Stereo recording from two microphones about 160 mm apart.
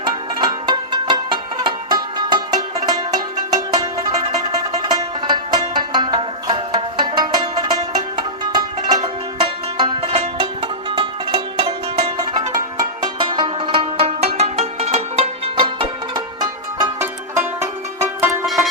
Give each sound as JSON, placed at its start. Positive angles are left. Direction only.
{"t": 0.0, "sound": "music", "side_deg": -25}
{"t": 18.4, "sound": "music", "side_deg": 0}